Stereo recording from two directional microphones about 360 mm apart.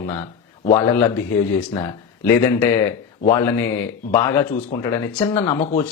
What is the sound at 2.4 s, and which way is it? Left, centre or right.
Speech, centre.